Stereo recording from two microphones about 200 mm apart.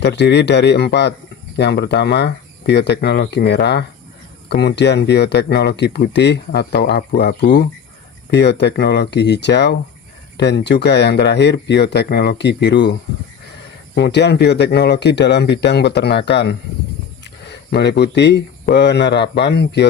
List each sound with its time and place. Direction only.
0.0 s speech: 60° left (ahead or behind)
7.2 s speech: 45° left (ahead or behind)
8.3 s speech: 60° left (ahead or behind)